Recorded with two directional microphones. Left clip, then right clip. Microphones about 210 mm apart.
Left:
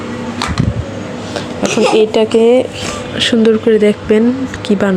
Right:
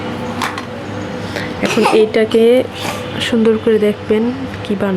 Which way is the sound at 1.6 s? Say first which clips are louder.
Left 1 dB; 20° right (ahead or behind).